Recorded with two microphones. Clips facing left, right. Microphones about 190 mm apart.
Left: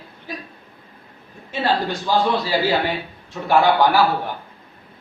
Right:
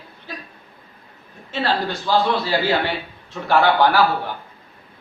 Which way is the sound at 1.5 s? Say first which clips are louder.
Left 1 dB; 15° left (ahead or behind).